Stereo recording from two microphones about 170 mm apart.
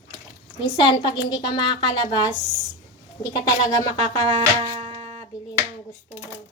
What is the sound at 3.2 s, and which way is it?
A woman's voice, 20° left (ahead or behind).